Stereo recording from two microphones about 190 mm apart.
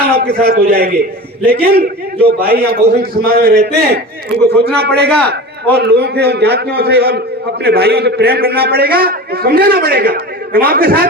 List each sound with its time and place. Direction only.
0.1 s a man's voice: 55° right (ahead or behind)